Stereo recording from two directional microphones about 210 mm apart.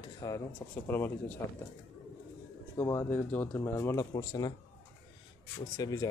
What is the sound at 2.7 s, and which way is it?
Speech, 10° left (ahead or behind).